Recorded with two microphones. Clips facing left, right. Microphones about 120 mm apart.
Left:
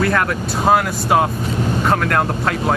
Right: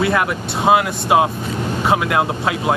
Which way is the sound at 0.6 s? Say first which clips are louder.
Right 1 dB; 5° right (ahead or behind).